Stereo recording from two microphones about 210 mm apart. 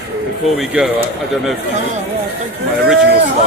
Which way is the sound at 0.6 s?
5° right (ahead or behind).